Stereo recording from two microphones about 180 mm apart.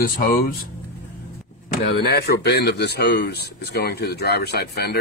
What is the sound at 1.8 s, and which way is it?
Speech, 65° left (ahead or behind).